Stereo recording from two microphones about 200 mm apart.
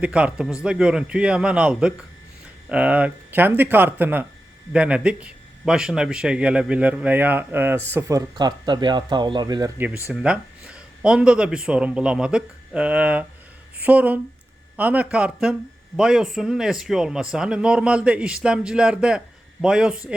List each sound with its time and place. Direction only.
0.0 s speech: 5° right (ahead or behind)